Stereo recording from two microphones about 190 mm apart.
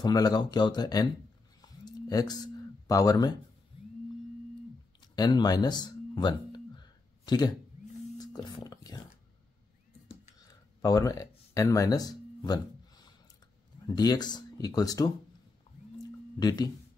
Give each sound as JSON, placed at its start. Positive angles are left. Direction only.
{"t": 0.0, "sound": "speech", "side_deg": 20}
{"t": 1.6, "sound": "a sound", "side_deg": 20}
{"t": 5.0, "sound": "music", "side_deg": 20}
{"t": 8.5, "sound": "speech", "side_deg": 20}
{"t": 10.4, "sound": "a sound", "side_deg": 20}
{"t": 13.8, "sound": "speech", "side_deg": 20}
{"t": 16.3, "sound": "speech", "side_deg": 20}